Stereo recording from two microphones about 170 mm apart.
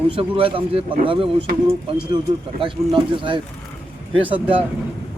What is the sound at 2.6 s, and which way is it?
Speech, 30° right (ahead or behind).